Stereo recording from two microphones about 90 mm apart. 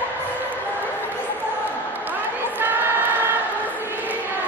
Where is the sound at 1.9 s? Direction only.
20° right (ahead or behind).